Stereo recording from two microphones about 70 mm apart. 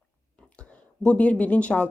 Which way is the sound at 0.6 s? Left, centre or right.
Centre.